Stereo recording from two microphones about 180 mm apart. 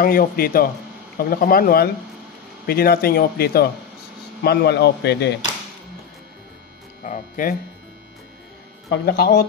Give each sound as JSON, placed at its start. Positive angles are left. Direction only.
{"t": 0.0, "sound": "speech", "side_deg": 55}
{"t": 7.0, "sound": "speech", "side_deg": 45}
{"t": 8.9, "sound": "speech", "side_deg": 65}